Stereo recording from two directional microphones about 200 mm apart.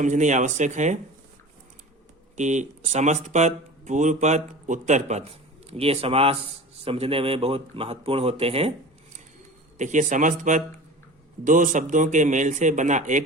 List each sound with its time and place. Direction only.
0.0 s speech: 35° right (ahead or behind)
2.3 s a man's voice: 35° right (ahead or behind)
9.7 s speech: 35° right (ahead or behind)